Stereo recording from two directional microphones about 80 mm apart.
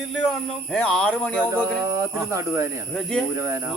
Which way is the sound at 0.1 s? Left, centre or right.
Centre.